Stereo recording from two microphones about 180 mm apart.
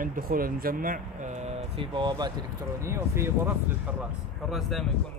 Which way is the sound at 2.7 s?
15° right (ahead or behind).